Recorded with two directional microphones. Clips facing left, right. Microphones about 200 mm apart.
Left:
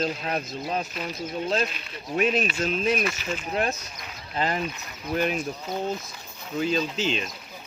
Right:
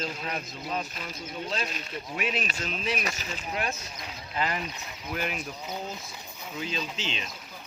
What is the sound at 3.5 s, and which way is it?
Speech, 40° left (ahead or behind).